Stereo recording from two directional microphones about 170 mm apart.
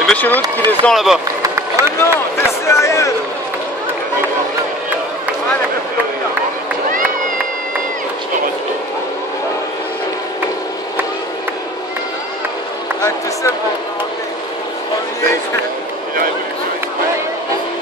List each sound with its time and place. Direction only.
0.0 s run: 10° left (ahead or behind)
0.7 s speech: centre (ahead or behind)
1.4 s run: 15° right (ahead or behind)
2.0 s speech: 15° left (ahead or behind)